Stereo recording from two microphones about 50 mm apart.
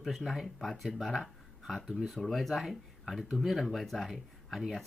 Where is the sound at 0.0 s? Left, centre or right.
Centre.